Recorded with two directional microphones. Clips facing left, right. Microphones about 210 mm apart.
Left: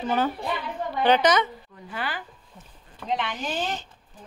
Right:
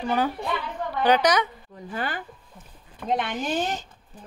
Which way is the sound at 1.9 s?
45° right (ahead or behind).